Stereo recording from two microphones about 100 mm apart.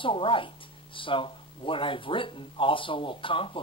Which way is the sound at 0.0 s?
60° left (ahead or behind).